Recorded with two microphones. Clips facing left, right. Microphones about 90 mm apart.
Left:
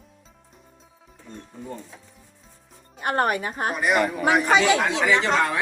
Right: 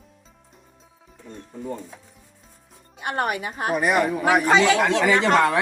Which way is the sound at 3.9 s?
10° right (ahead or behind).